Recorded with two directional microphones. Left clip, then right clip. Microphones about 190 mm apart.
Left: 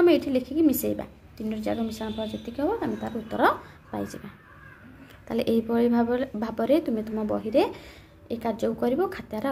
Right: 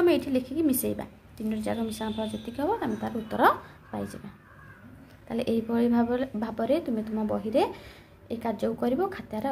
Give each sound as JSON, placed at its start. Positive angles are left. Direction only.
{"t": 0.0, "sound": "a woman's voice", "side_deg": 10}
{"t": 5.3, "sound": "speech", "side_deg": 10}